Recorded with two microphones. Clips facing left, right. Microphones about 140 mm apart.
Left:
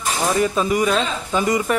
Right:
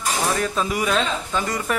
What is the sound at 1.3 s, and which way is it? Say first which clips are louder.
Speech: left 8 dB; 10° left (ahead or behind).